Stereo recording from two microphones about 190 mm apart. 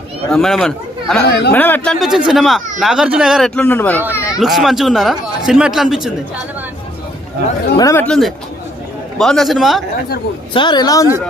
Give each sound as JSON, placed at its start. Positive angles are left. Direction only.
{"t": 0.3, "sound": "speech", "side_deg": 0}
{"t": 1.2, "sound": "speech", "side_deg": 60}
{"t": 1.5, "sound": "speech", "side_deg": 10}
{"t": 4.4, "sound": "speech", "side_deg": 0}
{"t": 7.8, "sound": "speech", "side_deg": 15}
{"t": 8.0, "sound": "speech", "side_deg": 5}
{"t": 10.5, "sound": "a woman's voice", "side_deg": 25}